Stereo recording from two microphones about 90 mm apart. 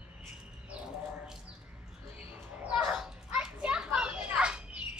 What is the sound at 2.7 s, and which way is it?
Children playing, 10° right (ahead or behind).